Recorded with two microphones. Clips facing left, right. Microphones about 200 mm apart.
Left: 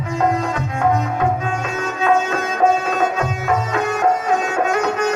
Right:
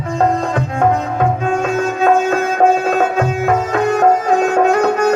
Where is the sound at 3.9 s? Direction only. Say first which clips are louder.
Right 5 dB; 35° right (ahead or behind).